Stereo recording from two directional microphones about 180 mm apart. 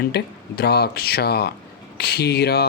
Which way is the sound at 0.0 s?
60° left (ahead or behind).